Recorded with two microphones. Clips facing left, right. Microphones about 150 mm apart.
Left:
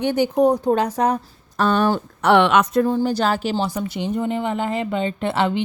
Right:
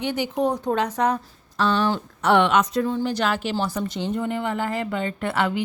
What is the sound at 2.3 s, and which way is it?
Speech, 75° left (ahead or behind).